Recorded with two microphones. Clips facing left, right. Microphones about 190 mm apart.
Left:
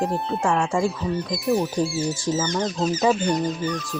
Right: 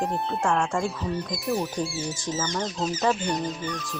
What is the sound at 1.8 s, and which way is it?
Speech, 35° left (ahead or behind).